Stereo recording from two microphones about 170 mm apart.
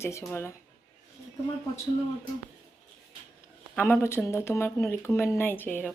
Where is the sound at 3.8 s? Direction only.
15° left (ahead or behind).